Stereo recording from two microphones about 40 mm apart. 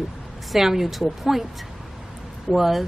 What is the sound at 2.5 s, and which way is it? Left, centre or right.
Speech, centre.